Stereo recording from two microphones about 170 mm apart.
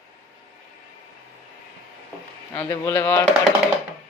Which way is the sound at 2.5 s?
15° left (ahead or behind).